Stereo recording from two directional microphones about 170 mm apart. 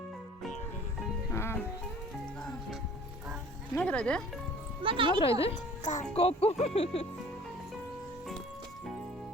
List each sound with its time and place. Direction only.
1.3 s music: 15° left (ahead or behind)
3.8 s speech: 5° left (ahead or behind)
4.8 s speech: 30° right (ahead or behind)
5.4 s speech: 40° left (ahead or behind)